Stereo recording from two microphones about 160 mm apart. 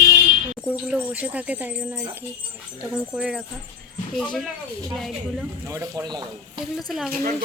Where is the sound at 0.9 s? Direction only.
10° right (ahead or behind).